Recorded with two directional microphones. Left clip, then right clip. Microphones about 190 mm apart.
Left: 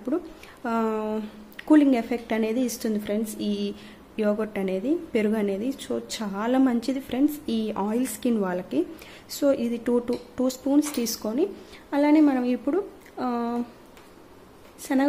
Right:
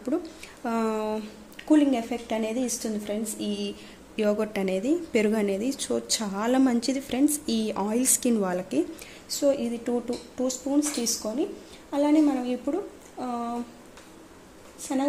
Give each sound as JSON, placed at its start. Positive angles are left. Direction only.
{"t": 0.1, "sound": "a sound", "side_deg": 5}
{"t": 0.7, "sound": "a woman's voice", "side_deg": 5}
{"t": 1.6, "sound": "a woman's voice", "side_deg": 20}
{"t": 4.2, "sound": "a woman's voice", "side_deg": 5}
{"t": 9.4, "sound": "speech", "side_deg": 15}
{"t": 14.8, "sound": "speech", "side_deg": 25}